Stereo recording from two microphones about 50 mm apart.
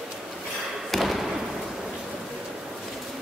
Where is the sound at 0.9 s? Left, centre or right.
Centre.